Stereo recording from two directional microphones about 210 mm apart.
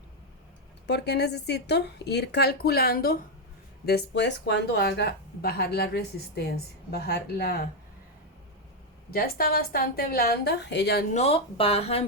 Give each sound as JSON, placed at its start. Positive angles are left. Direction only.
{"t": 0.9, "sound": "speech", "side_deg": 55}
{"t": 9.0, "sound": "speech", "side_deg": 45}
{"t": 11.1, "sound": "speech", "side_deg": 30}